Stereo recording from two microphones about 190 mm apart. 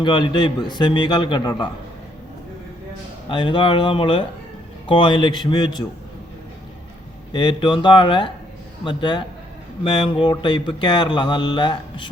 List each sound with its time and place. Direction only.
0.0 s speech: 25° left (ahead or behind)
3.2 s speech: 25° left (ahead or behind)
7.3 s speech: 25° left (ahead or behind)